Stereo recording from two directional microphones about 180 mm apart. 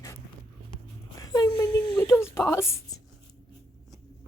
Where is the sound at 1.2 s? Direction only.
20° left (ahead or behind).